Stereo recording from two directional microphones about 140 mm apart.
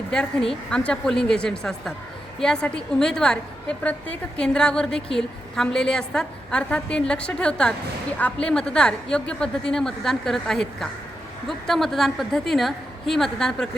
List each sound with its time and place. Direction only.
0.1 s a woman's voice: 5° left (ahead or behind)